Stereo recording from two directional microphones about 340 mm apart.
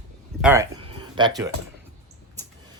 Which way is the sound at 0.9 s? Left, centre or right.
Centre.